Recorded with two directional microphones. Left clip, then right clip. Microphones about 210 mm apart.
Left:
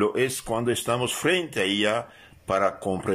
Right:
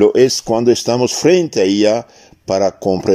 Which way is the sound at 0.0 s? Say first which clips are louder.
Right 13 dB; 25° right (ahead or behind).